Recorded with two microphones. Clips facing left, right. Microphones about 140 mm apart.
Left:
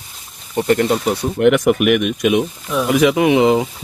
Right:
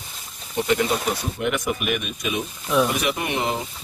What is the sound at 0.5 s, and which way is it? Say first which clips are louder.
Speech: left 6 dB; 50° left (ahead or behind).